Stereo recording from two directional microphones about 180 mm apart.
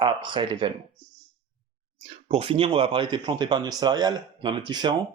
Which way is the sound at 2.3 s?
30° right (ahead or behind).